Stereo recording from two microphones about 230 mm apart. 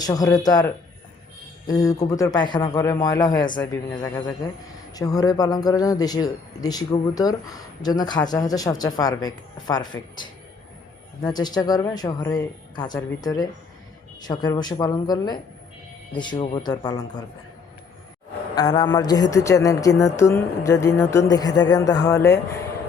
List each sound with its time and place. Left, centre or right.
0.0 s a man's voice: centre
11.2 s a man's voice: centre
18.5 s a man's voice: centre